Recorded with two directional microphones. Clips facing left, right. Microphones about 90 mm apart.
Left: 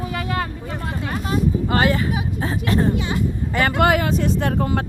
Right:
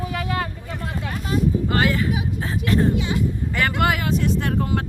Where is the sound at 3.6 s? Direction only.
30° left (ahead or behind).